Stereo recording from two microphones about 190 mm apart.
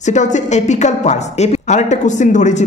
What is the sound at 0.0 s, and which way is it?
Speech, 40° left (ahead or behind).